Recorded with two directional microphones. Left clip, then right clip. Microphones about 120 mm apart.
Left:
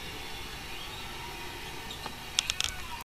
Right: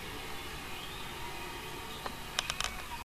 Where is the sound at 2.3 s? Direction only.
30° left (ahead or behind).